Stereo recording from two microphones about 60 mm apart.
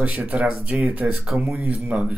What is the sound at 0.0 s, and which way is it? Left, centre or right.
Speech, right.